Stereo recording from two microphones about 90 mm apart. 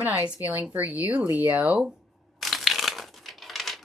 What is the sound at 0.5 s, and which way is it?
Speech, 20° right (ahead or behind).